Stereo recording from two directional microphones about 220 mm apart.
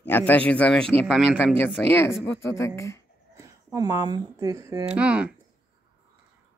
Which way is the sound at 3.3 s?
10° right (ahead or behind).